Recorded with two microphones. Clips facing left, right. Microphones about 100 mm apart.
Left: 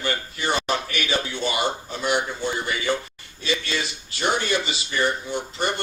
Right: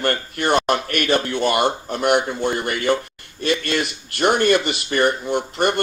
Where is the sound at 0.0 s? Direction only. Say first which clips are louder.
Right 5 dB; 55° right (ahead or behind).